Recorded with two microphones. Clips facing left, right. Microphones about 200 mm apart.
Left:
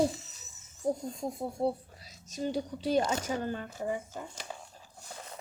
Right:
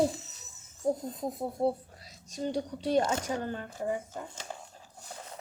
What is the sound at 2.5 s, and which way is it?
Speech, 5° left (ahead or behind).